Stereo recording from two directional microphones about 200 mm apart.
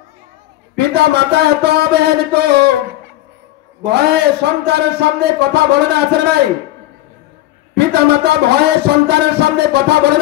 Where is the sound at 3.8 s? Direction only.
55° right (ahead or behind).